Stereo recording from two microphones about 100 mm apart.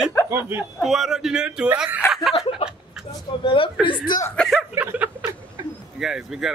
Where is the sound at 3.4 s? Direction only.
55° left (ahead or behind).